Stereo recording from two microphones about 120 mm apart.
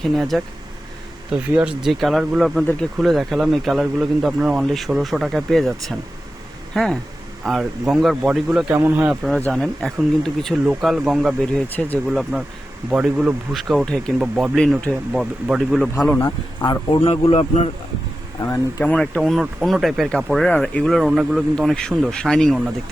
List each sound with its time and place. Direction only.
0.0 s speech: centre (ahead or behind)
8.7 s speech: 15° right (ahead or behind)
9.5 s speech: centre (ahead or behind)
14.6 s speech: 10° left (ahead or behind)
15.1 s speech: 5° right (ahead or behind)
16.6 s speech: 40° left (ahead or behind)
17.0 s speech: 55° left (ahead or behind)
18.9 s speech: 5° left (ahead or behind)